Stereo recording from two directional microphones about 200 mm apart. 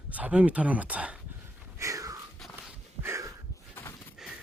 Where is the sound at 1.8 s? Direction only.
15° right (ahead or behind).